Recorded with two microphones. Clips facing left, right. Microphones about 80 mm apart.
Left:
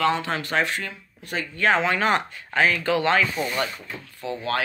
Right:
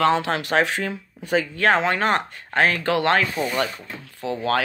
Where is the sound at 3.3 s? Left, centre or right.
Centre.